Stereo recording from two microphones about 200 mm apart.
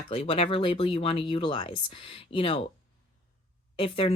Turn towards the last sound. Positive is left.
turn(degrees=25)  # may be behind; listen again after turning